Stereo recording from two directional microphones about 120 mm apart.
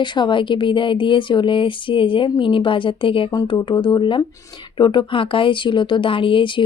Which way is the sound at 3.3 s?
35° left (ahead or behind).